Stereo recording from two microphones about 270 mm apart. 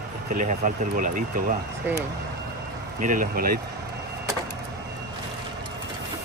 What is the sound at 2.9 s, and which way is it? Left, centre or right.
Speech, right.